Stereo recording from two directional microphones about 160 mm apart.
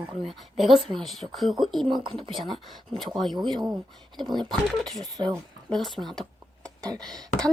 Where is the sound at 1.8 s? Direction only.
30° right (ahead or behind).